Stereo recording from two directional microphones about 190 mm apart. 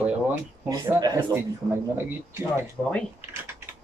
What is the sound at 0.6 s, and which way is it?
Speech, 20° right (ahead or behind).